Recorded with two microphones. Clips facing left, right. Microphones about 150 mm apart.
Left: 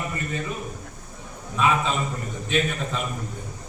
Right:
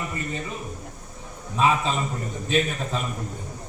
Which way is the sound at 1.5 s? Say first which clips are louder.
Right 1 dB; 35° right (ahead or behind).